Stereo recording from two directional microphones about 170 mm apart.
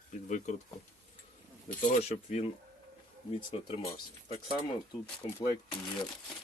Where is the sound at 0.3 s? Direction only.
45° left (ahead or behind).